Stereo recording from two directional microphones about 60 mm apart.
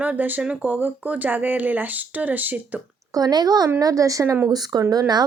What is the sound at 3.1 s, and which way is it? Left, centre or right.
A woman's voice, right.